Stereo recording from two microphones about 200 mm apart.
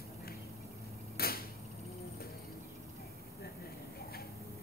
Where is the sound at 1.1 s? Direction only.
50° left (ahead or behind).